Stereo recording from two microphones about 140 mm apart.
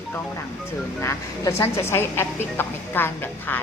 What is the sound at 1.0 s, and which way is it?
A woman's voice, 20° left (ahead or behind).